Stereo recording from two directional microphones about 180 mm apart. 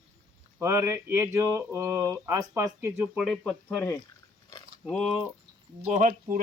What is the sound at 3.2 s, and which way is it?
Speech, 5° left (ahead or behind).